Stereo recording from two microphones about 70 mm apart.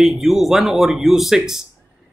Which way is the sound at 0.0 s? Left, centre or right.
Centre.